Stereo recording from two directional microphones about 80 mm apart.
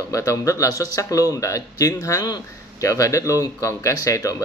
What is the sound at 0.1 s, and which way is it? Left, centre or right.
Speech, left.